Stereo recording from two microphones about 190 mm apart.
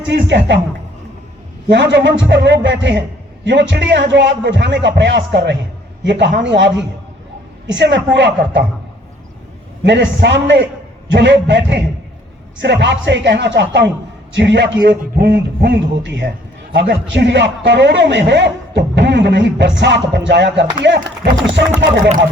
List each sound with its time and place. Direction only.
0.0 s a man's voice: 65° right (ahead or behind)
1.7 s a man's voice: 70° right (ahead or behind)
9.8 s a man's voice: 70° right (ahead or behind)
15.1 s a man's voice: 50° right (ahead or behind); by 22.1 s 70° right (ahead or behind)